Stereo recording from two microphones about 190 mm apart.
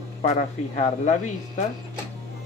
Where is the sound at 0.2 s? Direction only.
35° left (ahead or behind).